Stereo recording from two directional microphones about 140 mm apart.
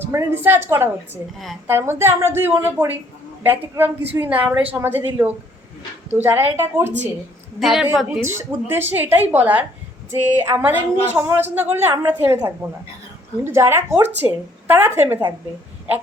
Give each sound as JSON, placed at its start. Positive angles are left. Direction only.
{"t": 0.0, "sound": "a woman's voice", "side_deg": -15}
{"t": 7.6, "sound": "a woman's voice", "side_deg": -5}
{"t": 8.2, "sound": "a woman's voice", "side_deg": -15}